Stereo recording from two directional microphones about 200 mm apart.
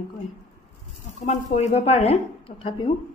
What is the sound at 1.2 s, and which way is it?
A woman's voice, 35° left (ahead or behind).